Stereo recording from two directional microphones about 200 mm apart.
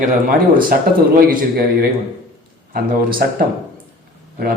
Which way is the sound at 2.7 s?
45° right (ahead or behind).